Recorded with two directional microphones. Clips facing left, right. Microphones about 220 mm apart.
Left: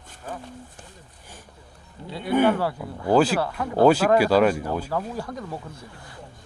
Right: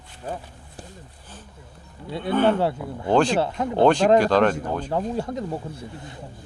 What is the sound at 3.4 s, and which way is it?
Speech, 25° right (ahead or behind).